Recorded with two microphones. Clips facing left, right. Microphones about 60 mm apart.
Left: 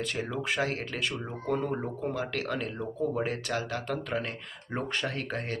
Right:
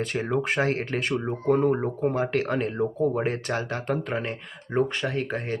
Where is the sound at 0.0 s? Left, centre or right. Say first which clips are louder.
Right 6 dB; right.